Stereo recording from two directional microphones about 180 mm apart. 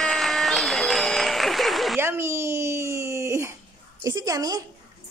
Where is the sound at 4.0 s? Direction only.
20° right (ahead or behind).